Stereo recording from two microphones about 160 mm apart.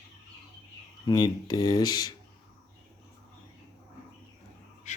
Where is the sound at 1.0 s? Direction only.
25° left (ahead or behind).